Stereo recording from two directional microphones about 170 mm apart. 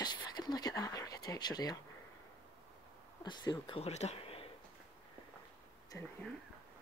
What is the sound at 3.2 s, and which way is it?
Speech, 25° left (ahead or behind).